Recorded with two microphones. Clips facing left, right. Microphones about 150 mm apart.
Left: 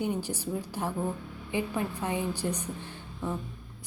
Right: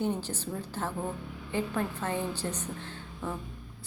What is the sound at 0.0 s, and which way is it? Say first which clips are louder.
Speech: even; 10° left (ahead or behind).